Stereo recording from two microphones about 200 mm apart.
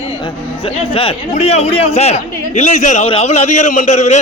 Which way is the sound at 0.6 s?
25° left (ahead or behind).